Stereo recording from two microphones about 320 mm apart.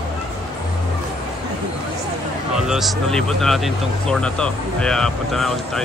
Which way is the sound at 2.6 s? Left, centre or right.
Centre.